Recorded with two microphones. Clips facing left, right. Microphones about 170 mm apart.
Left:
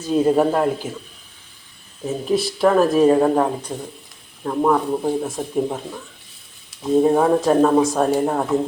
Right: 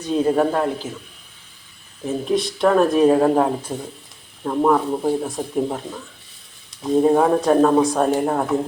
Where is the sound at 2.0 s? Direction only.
5° left (ahead or behind).